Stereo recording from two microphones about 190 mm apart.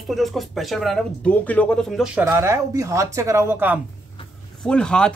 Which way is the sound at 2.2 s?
15° right (ahead or behind).